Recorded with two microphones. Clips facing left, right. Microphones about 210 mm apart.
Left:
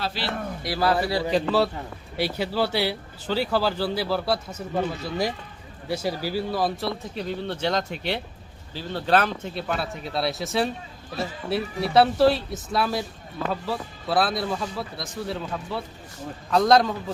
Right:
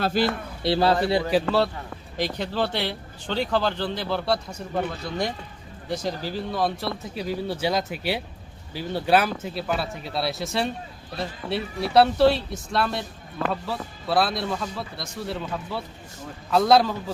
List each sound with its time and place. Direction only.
0.0 s speech: 50° right (ahead or behind)
0.6 s a man's voice: 25° right (ahead or behind)
1.3 s speech: centre (ahead or behind)